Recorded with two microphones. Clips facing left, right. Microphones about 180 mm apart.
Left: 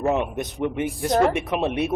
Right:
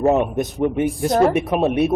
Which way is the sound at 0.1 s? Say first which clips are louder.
Right 6 dB; 40° right (ahead or behind).